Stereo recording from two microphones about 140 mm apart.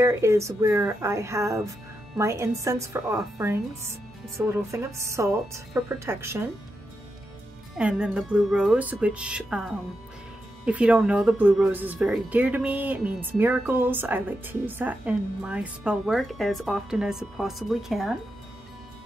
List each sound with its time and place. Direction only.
0.0 s speech: 20° right (ahead or behind)
7.7 s speech: 10° right (ahead or behind)